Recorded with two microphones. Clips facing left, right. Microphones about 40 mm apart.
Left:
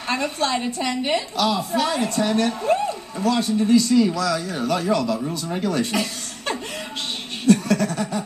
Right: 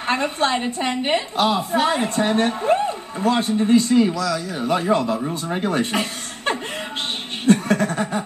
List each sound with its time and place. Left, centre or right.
0.0 s a woman's voice: right